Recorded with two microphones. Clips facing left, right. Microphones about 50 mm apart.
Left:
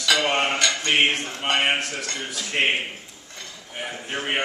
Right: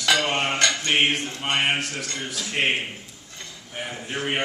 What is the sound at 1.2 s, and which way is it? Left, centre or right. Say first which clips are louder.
Speech: left 2 dB; left.